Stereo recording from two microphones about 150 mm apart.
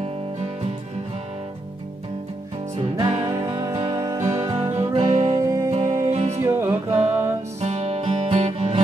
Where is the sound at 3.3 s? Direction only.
25° right (ahead or behind).